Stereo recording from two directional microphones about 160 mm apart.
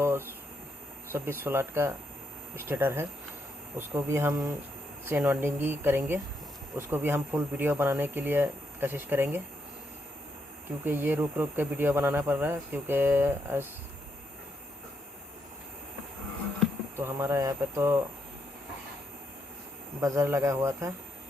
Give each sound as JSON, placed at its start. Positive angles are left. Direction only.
{"t": 0.0, "sound": "a sound", "side_deg": -15}
{"t": 1.1, "sound": "speech", "side_deg": -15}
{"t": 10.8, "sound": "speech", "side_deg": -10}
{"t": 17.0, "sound": "speech", "side_deg": -15}
{"t": 20.0, "sound": "speech", "side_deg": -20}